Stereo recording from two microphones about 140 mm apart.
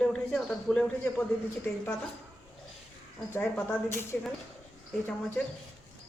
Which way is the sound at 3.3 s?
15° left (ahead or behind).